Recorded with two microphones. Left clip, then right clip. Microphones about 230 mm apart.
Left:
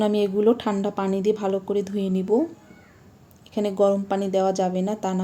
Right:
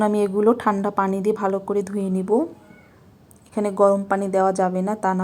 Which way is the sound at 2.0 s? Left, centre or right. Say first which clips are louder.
Right 1 dB; right.